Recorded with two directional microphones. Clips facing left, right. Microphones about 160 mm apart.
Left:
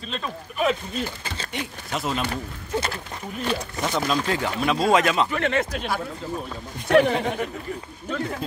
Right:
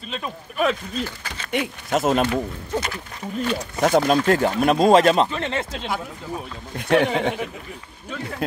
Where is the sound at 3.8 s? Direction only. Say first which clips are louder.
Right 9 dB; 50° right (ahead or behind).